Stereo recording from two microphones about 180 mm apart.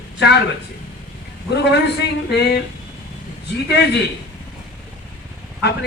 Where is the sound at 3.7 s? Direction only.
70° left (ahead or behind).